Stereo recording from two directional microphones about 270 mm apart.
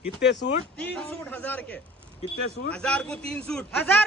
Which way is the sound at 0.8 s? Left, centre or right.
Centre.